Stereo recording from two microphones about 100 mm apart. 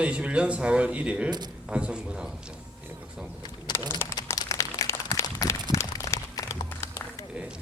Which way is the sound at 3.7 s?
30° left (ahead or behind).